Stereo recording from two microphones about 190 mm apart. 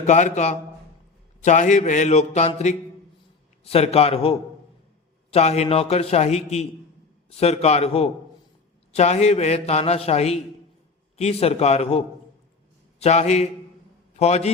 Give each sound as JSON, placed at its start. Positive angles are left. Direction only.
{"t": 0.0, "sound": "a man's voice", "side_deg": 40}
{"t": 13.0, "sound": "a man's voice", "side_deg": 35}